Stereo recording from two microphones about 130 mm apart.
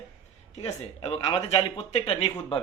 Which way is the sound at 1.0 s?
50° left (ahead or behind).